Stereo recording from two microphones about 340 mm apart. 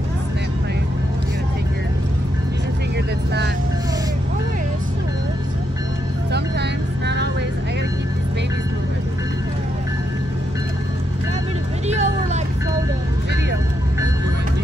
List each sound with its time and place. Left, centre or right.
11.9 s vehicle: centre